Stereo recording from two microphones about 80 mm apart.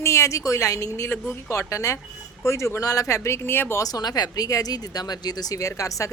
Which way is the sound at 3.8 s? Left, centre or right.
Left.